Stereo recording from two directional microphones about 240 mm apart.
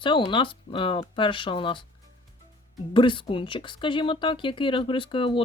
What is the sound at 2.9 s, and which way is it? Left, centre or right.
Speech, centre.